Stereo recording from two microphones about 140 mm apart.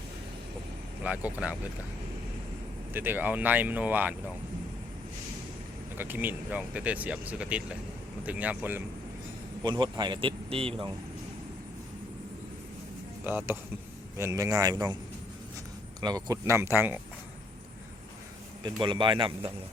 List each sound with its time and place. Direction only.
1.0 s speech: 10° right (ahead or behind)
2.9 s speech: 15° right (ahead or behind)
6.0 s speech: 15° right (ahead or behind)
9.6 s speech: 30° right (ahead or behind)
13.2 s speech: 15° right (ahead or behind)
16.0 s speech: 30° right (ahead or behind)
18.6 s speech: 35° right (ahead or behind)